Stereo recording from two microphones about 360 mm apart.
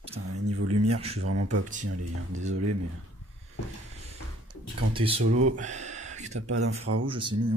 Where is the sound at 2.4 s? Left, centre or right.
Right.